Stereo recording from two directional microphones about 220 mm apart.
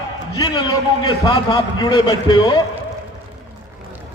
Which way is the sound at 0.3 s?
20° left (ahead or behind).